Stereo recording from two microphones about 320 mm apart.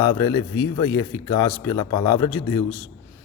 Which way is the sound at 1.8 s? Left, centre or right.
Left.